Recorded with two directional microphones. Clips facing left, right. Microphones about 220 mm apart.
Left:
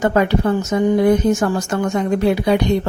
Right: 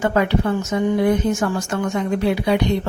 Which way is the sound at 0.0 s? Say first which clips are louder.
Left 3 dB; 45° left (ahead or behind).